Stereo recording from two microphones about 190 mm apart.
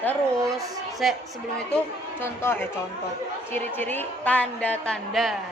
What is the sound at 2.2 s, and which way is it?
A woman's voice, 10° left (ahead or behind).